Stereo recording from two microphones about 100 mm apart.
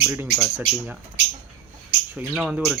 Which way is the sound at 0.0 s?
20° right (ahead or behind).